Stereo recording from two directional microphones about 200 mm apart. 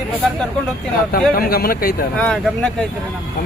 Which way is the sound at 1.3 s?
50° left (ahead or behind).